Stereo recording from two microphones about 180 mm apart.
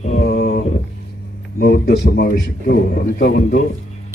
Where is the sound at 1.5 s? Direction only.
55° left (ahead or behind).